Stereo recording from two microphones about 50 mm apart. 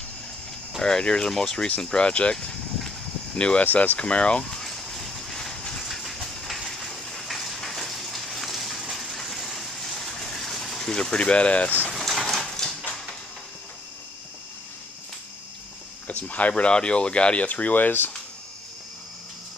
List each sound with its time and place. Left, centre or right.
0.7 s speech: centre
2.3 s a sound: centre
3.3 s speech: centre
3.6 s speech: left
4.0 s speech: left
4.5 s a sound: centre
5.9 s train: centre
10.9 s speech: centre
11.9 s a sound: centre
16.1 s speech: left